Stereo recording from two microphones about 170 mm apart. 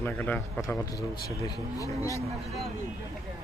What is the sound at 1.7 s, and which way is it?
Speech, 20° left (ahead or behind).